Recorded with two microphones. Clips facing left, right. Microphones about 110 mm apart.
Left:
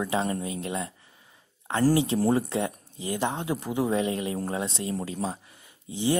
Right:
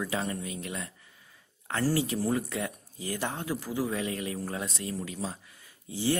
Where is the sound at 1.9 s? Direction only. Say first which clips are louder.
Left 5 dB; 25° left (ahead or behind).